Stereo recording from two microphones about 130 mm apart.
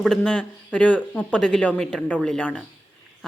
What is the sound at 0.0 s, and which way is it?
A woman's voice, 5° left (ahead or behind).